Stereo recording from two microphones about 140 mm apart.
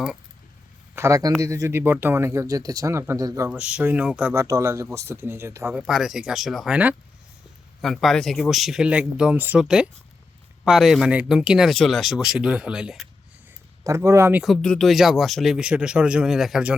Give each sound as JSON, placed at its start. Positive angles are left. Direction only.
{"t": 0.9, "sound": "speech", "side_deg": -20}
{"t": 3.5, "sound": "speech", "side_deg": -10}
{"t": 4.4, "sound": "speech", "side_deg": -25}
{"t": 5.7, "sound": "speech", "side_deg": -5}
{"t": 7.8, "sound": "speech", "side_deg": 0}
{"t": 13.8, "sound": "speech", "side_deg": -20}
{"t": 14.4, "sound": "speech", "side_deg": 5}